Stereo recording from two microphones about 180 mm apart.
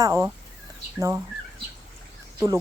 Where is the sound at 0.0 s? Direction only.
20° right (ahead or behind).